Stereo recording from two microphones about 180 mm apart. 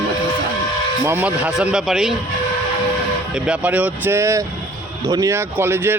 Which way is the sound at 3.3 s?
5° right (ahead or behind).